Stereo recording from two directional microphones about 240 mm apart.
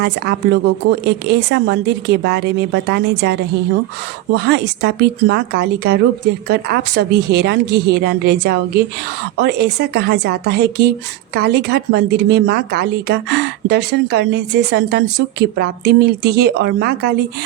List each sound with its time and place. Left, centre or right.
0.0 s a woman's voice: right